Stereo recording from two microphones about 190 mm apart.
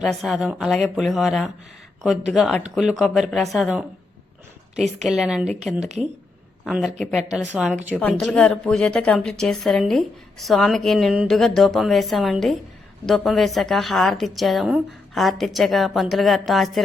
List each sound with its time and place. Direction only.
0.0 s a woman's voice: centre (ahead or behind)